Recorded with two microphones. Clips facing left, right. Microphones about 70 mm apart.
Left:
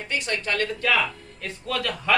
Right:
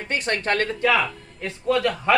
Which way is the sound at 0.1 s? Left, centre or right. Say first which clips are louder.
Right 4 dB; right.